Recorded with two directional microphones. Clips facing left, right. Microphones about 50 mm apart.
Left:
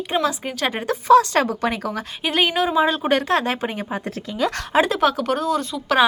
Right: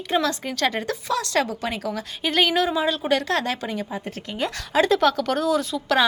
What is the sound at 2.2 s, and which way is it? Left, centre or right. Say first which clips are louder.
Speech: left 1 dB; centre.